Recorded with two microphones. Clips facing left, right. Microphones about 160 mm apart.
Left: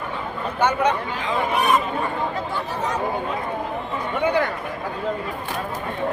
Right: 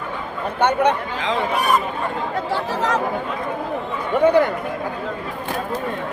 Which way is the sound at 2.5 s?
90° right.